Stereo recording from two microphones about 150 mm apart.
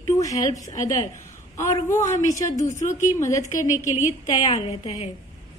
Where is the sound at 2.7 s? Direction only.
55° left (ahead or behind).